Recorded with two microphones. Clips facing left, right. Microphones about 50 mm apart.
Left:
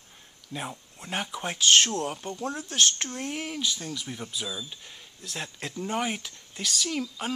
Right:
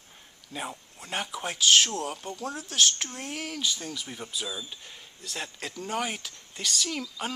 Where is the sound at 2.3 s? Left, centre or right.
Left.